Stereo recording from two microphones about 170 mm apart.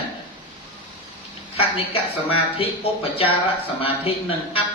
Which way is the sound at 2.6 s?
35° left (ahead or behind).